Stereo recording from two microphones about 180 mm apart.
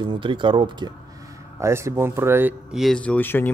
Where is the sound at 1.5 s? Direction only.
15° right (ahead or behind).